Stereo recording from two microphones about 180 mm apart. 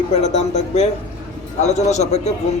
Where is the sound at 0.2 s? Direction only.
40° left (ahead or behind).